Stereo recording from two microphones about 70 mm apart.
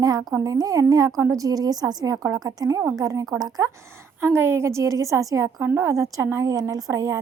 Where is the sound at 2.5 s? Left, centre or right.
Right.